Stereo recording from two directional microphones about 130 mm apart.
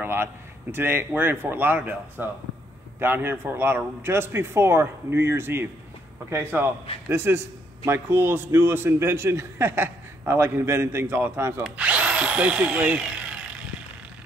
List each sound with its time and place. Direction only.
0.0 s a man's voice: 20° right (ahead or behind)
11.6 s speech: 10° right (ahead or behind)